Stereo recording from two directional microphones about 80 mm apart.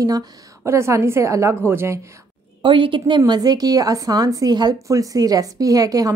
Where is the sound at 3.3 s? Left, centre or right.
Right.